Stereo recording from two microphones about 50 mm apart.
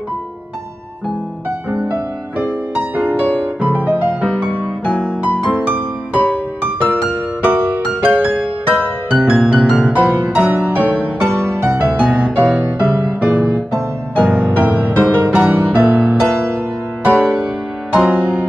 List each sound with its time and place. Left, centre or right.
1.7 s music: right
4.8 s music: left
5.4 s music: right
11.5 s music: right
15.0 s music: left
15.2 s music: right